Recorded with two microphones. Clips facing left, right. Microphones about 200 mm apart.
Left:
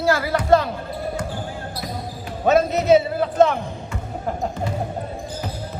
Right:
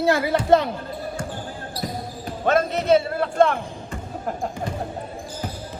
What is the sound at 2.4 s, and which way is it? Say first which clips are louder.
Speech: left 3 dB; 5° left (ahead or behind).